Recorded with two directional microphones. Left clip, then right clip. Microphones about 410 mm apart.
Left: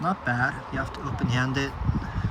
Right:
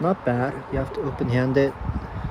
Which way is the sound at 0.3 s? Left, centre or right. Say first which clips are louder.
Right 1 dB; right.